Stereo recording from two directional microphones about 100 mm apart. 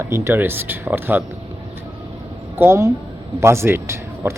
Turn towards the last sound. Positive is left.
turn(degrees=-25)  # may be behind; listen again after turning